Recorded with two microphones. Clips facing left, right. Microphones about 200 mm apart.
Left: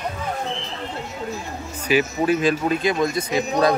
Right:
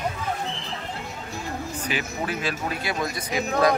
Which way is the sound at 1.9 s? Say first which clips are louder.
Left 11 dB; 15° left (ahead or behind).